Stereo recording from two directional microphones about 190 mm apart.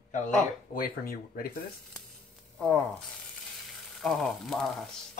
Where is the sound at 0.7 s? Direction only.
50° left (ahead or behind).